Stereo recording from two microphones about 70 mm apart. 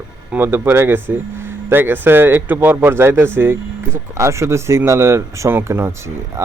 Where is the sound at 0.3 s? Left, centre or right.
Right.